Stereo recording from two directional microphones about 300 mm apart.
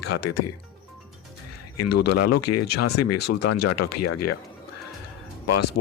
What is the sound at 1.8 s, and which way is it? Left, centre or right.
Speech, left.